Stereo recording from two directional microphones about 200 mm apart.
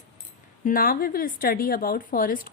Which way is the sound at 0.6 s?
45° left (ahead or behind).